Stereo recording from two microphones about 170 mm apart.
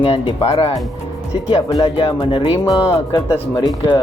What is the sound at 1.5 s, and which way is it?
Speech, 30° left (ahead or behind).